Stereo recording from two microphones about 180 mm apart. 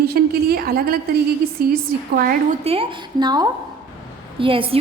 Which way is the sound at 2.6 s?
30° right (ahead or behind).